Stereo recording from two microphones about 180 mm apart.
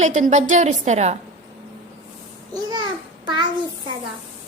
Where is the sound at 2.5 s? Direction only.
25° right (ahead or behind).